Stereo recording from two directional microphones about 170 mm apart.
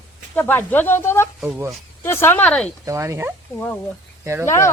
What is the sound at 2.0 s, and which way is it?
Speech, 15° left (ahead or behind).